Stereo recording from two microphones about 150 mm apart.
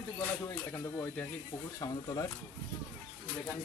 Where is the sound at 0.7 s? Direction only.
15° left (ahead or behind).